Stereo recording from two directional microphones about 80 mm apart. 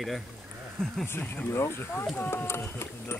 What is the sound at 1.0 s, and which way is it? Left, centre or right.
Speech, left.